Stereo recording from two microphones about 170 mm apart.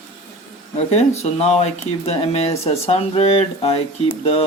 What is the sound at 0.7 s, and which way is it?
Speech, 40° left (ahead or behind).